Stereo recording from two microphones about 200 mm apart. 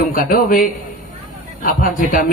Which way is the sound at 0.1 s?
45° left (ahead or behind).